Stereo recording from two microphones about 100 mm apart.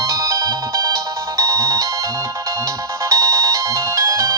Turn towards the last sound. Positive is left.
turn(degrees=-30)  # may be behind; listen again after turning